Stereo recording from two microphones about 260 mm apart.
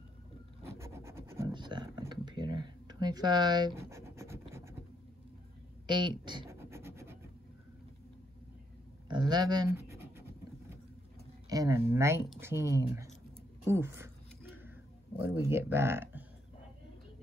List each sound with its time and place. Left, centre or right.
0.7 s scratch: centre
5.9 s scratch: centre
9.1 s pant: centre
11.4 s speech: centre
13.7 s a sound: centre
15.1 s speech: centre